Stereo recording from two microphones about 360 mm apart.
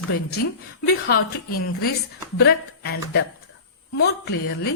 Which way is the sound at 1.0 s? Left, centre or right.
Left.